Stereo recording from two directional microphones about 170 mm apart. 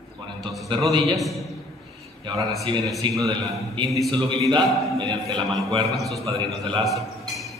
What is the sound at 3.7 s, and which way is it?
Speech, 25° right (ahead or behind).